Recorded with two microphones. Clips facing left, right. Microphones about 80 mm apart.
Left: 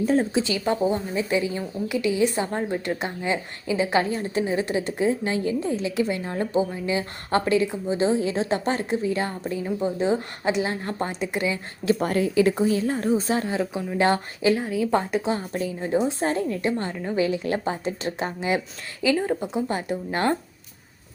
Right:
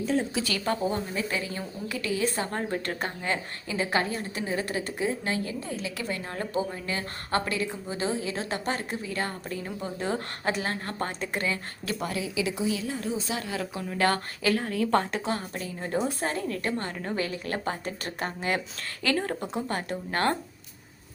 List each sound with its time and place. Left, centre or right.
0.0 s speech: left
0.3 s a woman's voice: centre
11.9 s a woman's voice: left; by 16.9 s centre
16.9 s a woman's voice: centre
17.2 s a woman's voice: left